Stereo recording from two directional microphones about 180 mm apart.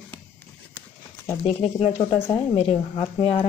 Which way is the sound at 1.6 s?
35° left (ahead or behind).